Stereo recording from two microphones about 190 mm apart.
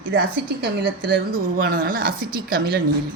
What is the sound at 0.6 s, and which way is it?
A woman's voice, 55° right (ahead or behind).